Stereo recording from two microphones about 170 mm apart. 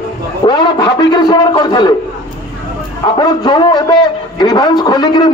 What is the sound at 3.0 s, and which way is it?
A man's voice, 25° left (ahead or behind).